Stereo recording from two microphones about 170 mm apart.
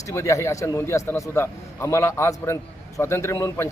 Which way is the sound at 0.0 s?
15° left (ahead or behind).